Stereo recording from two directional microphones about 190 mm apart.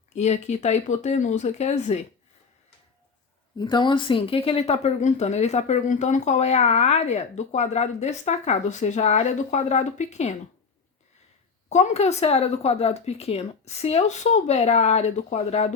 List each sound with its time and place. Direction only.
0.1 s speech: 35° left (ahead or behind)
3.6 s speech: 25° left (ahead or behind)
11.7 s speech: 35° left (ahead or behind)